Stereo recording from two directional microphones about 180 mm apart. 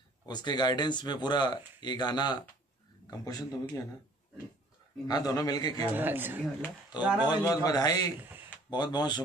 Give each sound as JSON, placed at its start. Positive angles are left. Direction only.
{"t": 0.3, "sound": "speech", "side_deg": 25}
{"t": 5.0, "sound": "speech", "side_deg": 20}
{"t": 5.9, "sound": "speech", "side_deg": -10}
{"t": 7.2, "sound": "speech", "side_deg": 20}